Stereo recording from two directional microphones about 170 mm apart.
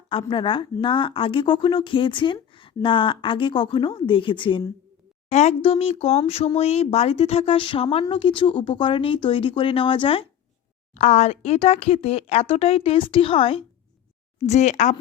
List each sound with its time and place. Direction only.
0.1 s a woman's voice: 30° left (ahead or behind)
5.3 s speech: 40° left (ahead or behind)
10.9 s speech: 45° left (ahead or behind)